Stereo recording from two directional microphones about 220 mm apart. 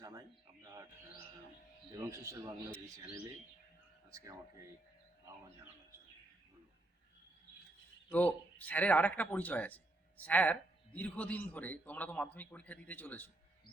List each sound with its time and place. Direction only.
0.0 s a sound: 15° right (ahead or behind)
1.9 s speech: 15° right (ahead or behind)
4.1 s speech: 15° right (ahead or behind)
8.1 s speech: 5° left (ahead or behind)